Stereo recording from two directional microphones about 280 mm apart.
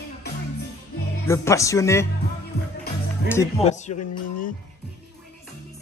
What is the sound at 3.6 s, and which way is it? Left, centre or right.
Speech, left.